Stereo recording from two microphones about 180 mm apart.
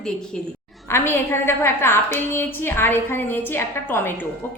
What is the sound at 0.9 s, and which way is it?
A woman's voice, 15° left (ahead or behind).